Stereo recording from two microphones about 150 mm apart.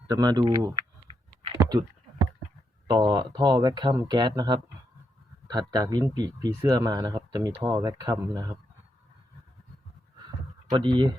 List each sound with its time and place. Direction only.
0.1 s speech: 25° right (ahead or behind)
1.0 s computer keyboard: 40° right (ahead or behind)
1.5 s a sound: 25° right (ahead or behind)
2.8 s speech: 30° right (ahead or behind)
10.7 s speech: 30° right (ahead or behind)